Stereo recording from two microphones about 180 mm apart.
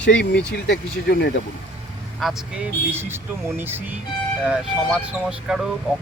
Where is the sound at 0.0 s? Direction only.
75° left (ahead or behind).